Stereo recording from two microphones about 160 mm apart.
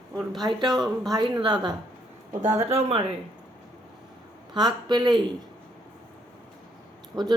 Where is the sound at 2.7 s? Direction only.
40° right (ahead or behind).